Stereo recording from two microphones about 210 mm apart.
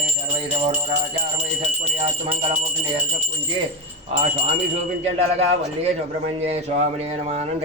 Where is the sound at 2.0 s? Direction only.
25° right (ahead or behind).